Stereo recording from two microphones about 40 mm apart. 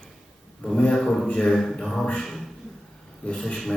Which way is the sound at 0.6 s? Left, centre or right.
Left.